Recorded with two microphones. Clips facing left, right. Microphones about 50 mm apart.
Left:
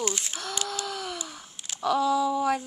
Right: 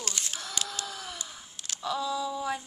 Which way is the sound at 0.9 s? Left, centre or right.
Left.